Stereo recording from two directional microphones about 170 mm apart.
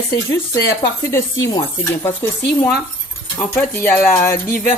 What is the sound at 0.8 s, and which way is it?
Speech, 15° left (ahead or behind).